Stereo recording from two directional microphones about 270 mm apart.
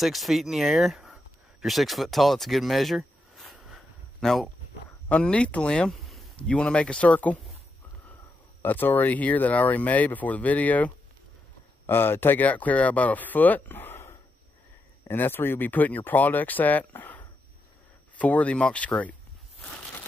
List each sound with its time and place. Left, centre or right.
0.0 s speech: centre
8.6 s speech: centre